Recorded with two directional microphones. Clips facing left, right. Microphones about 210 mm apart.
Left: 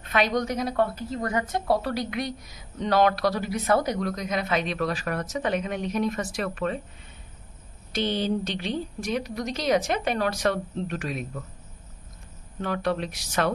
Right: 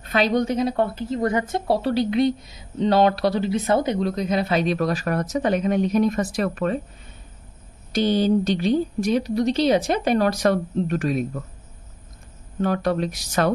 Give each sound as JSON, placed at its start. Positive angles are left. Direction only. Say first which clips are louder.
{"t": 0.0, "sound": "a woman's voice", "louder": "right 4 dB", "side_deg": -30}
{"t": 7.9, "sound": "a woman's voice", "louder": "right 7 dB", "side_deg": -40}
{"t": 12.6, "sound": "a woman's voice", "louder": "right 5 dB", "side_deg": -40}